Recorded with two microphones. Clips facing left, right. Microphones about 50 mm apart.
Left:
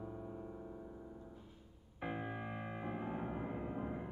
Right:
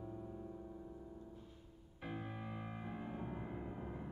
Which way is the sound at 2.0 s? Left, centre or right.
Left.